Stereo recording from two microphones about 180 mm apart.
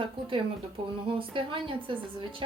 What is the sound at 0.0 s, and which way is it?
Speech, 30° right (ahead or behind).